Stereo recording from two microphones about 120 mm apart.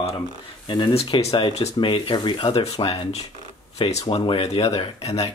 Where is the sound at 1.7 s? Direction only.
45° left (ahead or behind).